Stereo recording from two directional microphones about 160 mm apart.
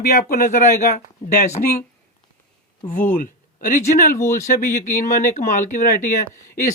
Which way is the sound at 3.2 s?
60° left (ahead or behind).